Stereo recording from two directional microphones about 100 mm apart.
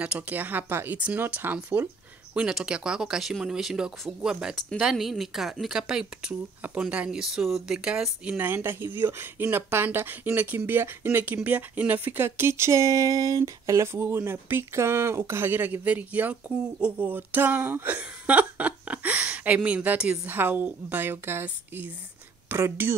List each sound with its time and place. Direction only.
0.0 s speech: 15° right (ahead or behind)